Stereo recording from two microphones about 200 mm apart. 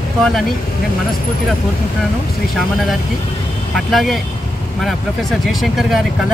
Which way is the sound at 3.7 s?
Centre (ahead or behind).